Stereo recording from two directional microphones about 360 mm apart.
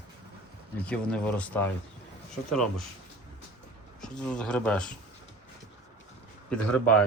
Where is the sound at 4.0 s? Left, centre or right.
Centre.